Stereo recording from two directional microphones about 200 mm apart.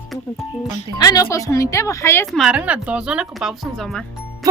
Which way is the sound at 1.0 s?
20° left (ahead or behind).